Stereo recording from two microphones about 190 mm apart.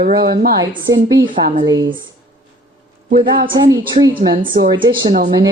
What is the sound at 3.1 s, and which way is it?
Speech, 50° right (ahead or behind).